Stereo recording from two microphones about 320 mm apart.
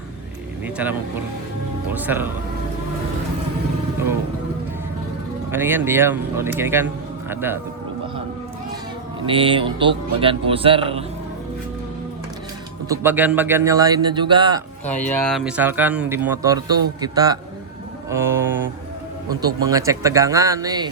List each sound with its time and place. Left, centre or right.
0.6 s speech: centre
5.5 s speech: centre
9.2 s speech: centre
12.9 s speech: centre
14.9 s speech: centre
19.6 s speech: centre